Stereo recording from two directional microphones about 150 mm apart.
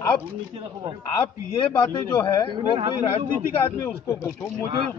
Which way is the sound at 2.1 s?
25° left (ahead or behind).